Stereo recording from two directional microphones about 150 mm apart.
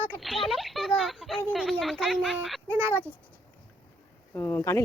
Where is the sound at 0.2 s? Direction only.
Centre (ahead or behind).